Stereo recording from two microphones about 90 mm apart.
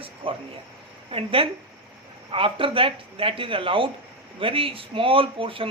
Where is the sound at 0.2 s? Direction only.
80° right.